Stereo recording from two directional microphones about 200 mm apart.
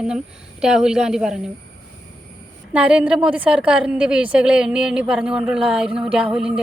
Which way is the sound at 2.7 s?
5° right (ahead or behind).